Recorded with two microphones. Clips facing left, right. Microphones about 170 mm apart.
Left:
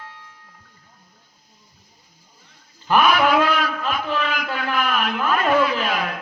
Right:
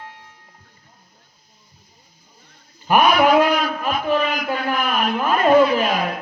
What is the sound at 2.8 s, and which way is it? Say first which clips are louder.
Speech: right 2 dB; 15° right (ahead or behind).